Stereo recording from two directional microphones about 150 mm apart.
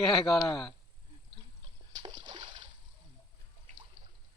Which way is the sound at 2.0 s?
30° right (ahead or behind).